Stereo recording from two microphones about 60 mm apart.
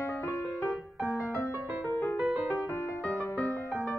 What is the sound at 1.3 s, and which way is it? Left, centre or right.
Music, left.